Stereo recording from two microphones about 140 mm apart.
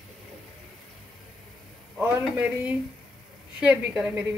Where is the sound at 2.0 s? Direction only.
10° right (ahead or behind).